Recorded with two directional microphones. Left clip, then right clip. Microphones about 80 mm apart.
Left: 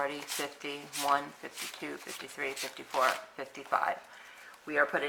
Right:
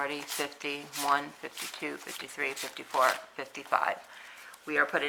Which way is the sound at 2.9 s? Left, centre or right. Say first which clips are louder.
Right 3 dB; centre.